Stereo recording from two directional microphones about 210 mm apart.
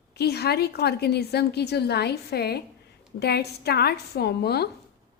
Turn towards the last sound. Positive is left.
turn(degrees=50)  # may be behind; listen again after turning